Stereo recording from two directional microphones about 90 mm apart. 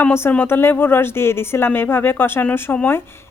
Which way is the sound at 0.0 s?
25° left (ahead or behind).